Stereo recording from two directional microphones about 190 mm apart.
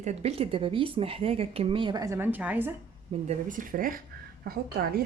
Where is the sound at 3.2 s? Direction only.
45° right (ahead or behind).